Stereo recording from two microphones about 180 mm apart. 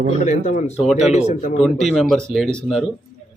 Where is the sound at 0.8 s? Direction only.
Centre (ahead or behind).